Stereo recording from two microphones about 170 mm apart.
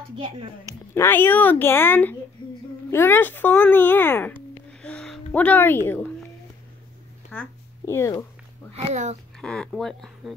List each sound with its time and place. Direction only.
0.1 s a child's voice: 30° right (ahead or behind)
0.9 s speech: 15° left (ahead or behind)
4.8 s a sound: 5° left (ahead or behind)
7.3 s speech: 15° left (ahead or behind)
8.7 s a child's voice: 40° right (ahead or behind)
9.4 s speech: 5° left (ahead or behind)